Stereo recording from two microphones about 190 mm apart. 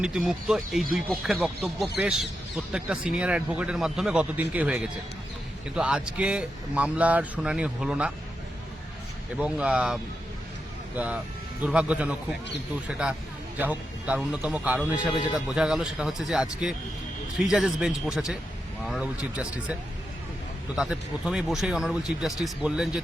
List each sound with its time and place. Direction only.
0.0 s speech: 5° right (ahead or behind)
9.4 s a man's voice: 5° right (ahead or behind)
20.7 s speech: 5° right (ahead or behind)